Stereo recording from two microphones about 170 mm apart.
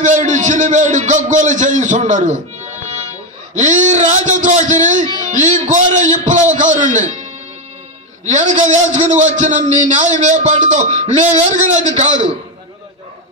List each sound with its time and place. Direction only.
0.0 s a man's voice: 45° right (ahead or behind)
8.3 s a man's voice: 45° right (ahead or behind)